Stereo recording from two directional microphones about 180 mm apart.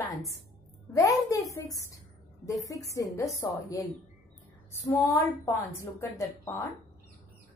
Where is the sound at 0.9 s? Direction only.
20° left (ahead or behind).